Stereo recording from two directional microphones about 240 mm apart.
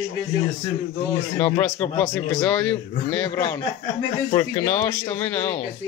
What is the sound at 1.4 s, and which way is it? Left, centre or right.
Speech, centre.